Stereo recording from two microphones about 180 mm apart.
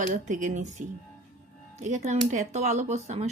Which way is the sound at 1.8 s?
40° right (ahead or behind).